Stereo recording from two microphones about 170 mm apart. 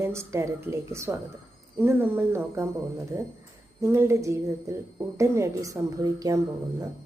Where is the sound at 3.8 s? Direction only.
15° right (ahead or behind).